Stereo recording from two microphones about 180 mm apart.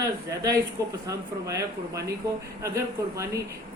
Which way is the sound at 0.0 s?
20° right (ahead or behind).